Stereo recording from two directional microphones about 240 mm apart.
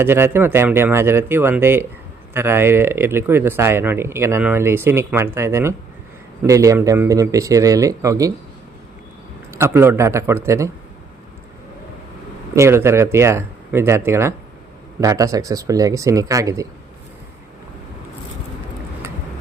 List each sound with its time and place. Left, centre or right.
0.0 s speech: centre
9.5 s speech: centre
12.5 s speech: centre